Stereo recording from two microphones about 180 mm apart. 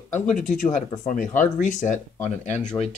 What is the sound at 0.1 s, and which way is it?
Speech, 45° left (ahead or behind).